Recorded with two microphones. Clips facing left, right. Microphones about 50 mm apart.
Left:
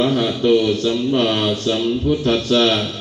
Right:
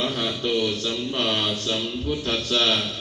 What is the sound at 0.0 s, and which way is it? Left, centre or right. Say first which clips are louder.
Speech: left 9 dB; left.